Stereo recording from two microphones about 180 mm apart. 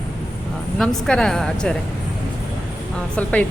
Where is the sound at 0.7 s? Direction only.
5° left (ahead or behind).